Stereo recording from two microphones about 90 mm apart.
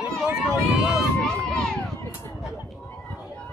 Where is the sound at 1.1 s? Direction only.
10° left (ahead or behind).